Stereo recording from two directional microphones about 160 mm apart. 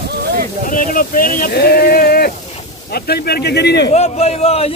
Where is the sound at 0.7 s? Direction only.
60° left (ahead or behind).